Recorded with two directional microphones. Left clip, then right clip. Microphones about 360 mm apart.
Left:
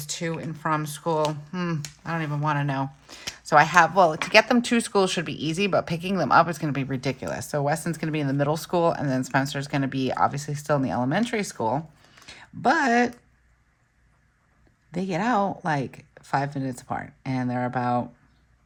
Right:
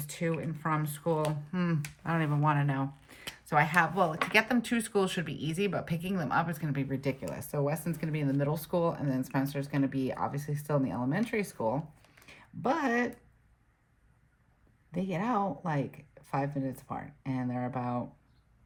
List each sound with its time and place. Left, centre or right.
0.0 s speech: centre
14.9 s speech: centre